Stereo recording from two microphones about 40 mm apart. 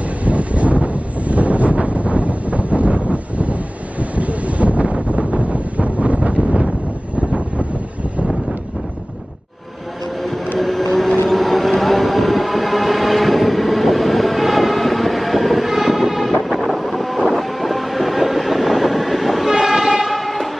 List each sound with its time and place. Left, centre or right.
0.2 s wind noise: right
7.2 s vehicle: right
10.2 s vehicle: centre
11.2 s train: centre
20.1 s vehicle: centre